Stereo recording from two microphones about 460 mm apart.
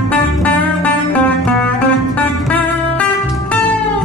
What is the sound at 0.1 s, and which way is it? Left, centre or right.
Music, centre.